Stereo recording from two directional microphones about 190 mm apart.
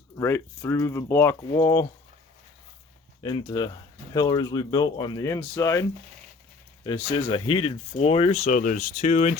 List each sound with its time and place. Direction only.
0.2 s speech: 15° left (ahead or behind)
3.2 s speech: 20° left (ahead or behind)
6.8 s speech: 25° left (ahead or behind)
8.4 s speech: 45° left (ahead or behind)